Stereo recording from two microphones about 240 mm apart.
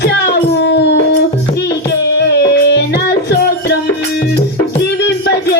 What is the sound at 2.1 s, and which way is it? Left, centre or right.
Music, left.